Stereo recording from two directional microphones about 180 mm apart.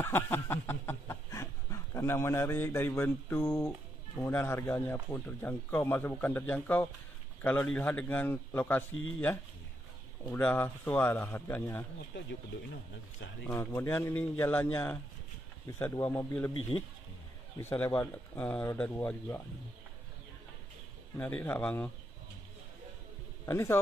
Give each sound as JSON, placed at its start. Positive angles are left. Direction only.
{"t": 0.0, "sound": "dog", "side_deg": 10}
{"t": 4.2, "sound": "speech", "side_deg": 10}
{"t": 13.4, "sound": "speech", "side_deg": 15}
{"t": 17.6, "sound": "speech", "side_deg": 15}
{"t": 21.2, "sound": "speech", "side_deg": 10}
{"t": 23.4, "sound": "a man's voice", "side_deg": 15}